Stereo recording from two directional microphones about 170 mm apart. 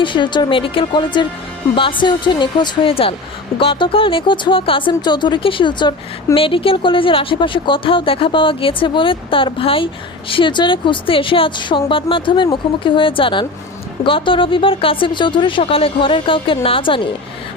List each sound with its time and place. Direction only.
0.0 s speech: 30° left (ahead or behind)